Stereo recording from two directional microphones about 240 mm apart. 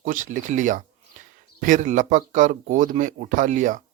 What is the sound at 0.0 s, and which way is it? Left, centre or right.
Speech, right.